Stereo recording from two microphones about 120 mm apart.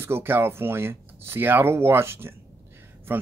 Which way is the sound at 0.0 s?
20° right (ahead or behind).